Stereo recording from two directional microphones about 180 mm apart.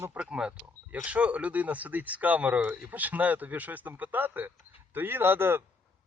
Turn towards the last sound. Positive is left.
turn(degrees=-10)  # may be behind; listen again after turning